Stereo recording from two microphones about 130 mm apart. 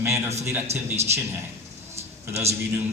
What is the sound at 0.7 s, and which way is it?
Speech, 55° right (ahead or behind).